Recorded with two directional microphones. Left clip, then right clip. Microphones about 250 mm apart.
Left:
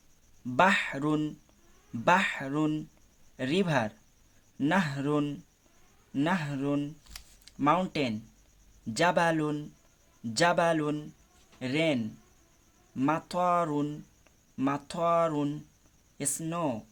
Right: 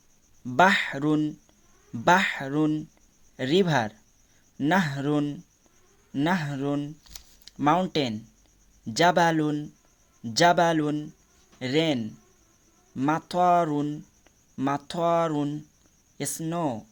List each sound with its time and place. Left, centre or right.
0.5 s speech: centre